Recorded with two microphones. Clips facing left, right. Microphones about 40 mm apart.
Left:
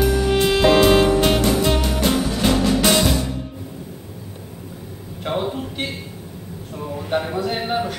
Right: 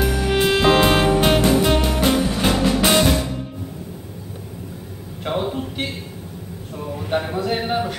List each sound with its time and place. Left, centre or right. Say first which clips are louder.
0.3 s music: right 1 dB; centre
5.2 s a sound: even; centre
6.8 s speech: even; centre